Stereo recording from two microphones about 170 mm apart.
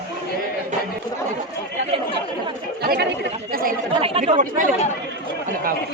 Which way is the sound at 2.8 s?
70° right (ahead or behind).